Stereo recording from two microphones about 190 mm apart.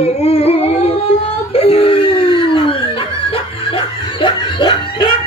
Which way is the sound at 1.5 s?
30° left (ahead or behind).